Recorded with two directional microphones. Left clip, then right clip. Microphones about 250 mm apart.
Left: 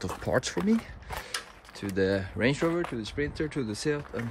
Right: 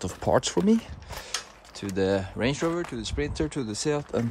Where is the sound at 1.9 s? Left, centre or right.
Centre.